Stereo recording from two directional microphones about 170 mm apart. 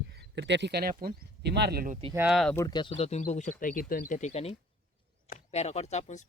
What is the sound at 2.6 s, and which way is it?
Speech, 25° left (ahead or behind).